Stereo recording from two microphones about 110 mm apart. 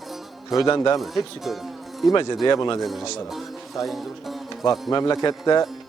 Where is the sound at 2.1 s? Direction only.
40° left (ahead or behind).